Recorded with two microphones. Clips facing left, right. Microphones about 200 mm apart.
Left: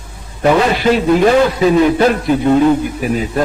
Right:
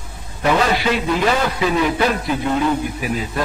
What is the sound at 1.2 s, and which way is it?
A man's voice, 40° left (ahead or behind).